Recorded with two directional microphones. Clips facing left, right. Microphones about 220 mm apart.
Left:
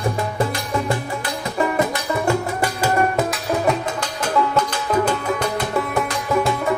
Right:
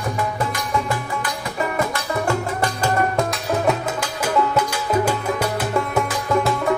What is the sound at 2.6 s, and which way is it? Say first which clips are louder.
Music: left 1 dB; 10° left (ahead or behind).